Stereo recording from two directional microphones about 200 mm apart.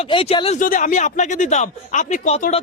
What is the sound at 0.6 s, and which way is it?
Speech, 40° left (ahead or behind).